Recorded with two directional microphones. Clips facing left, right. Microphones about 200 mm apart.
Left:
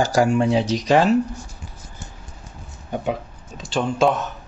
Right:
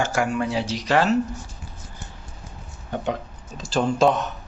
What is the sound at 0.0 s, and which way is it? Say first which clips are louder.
Speech: left 5 dB; 35° left (ahead or behind).